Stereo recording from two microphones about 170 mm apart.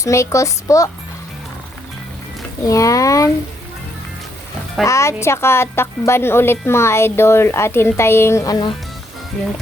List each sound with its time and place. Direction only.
0.0 s speech: 15° left (ahead or behind)
2.6 s speech: 20° left (ahead or behind)
4.9 s a woman's voice: 15° left (ahead or behind)